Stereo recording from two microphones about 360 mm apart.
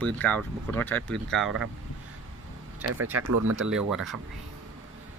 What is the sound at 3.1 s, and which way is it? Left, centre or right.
Speech, right.